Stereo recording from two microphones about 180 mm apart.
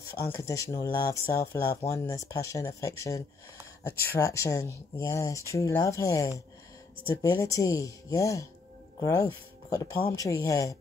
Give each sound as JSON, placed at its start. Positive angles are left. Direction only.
{"t": 0.2, "sound": "speech", "side_deg": 15}